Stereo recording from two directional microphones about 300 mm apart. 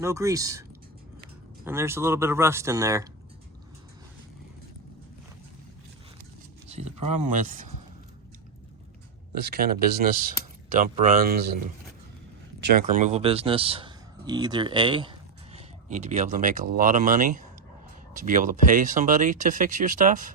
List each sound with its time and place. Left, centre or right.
0.0 s speech: centre
1.6 s speech: centre
6.7 s a sound: right
7.3 s speech: right
9.3 s speech: right
12.5 s speech: right